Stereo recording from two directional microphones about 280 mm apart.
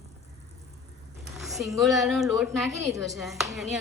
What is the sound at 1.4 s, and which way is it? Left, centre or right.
A woman's voice, centre.